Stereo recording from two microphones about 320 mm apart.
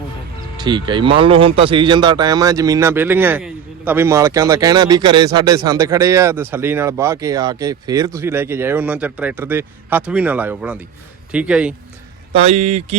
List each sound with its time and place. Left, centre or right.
0.6 s speech: centre
12.3 s speech: centre